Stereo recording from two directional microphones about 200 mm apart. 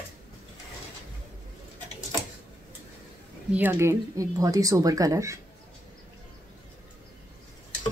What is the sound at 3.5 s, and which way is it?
Speech, 10° right (ahead or behind).